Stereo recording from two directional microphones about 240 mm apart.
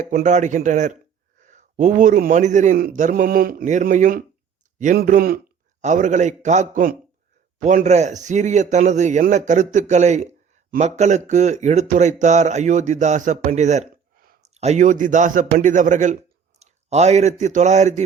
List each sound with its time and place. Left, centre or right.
0.1 s a man's voice: right